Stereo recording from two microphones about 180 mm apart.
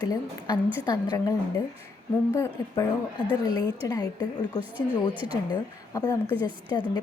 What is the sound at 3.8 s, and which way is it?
A woman's voice, 20° left (ahead or behind).